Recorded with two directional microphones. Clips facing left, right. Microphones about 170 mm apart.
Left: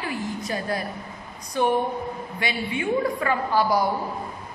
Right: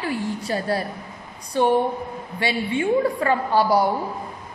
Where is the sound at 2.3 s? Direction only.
30° right (ahead or behind).